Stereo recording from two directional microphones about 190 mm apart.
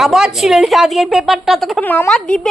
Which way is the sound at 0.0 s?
Centre (ahead or behind).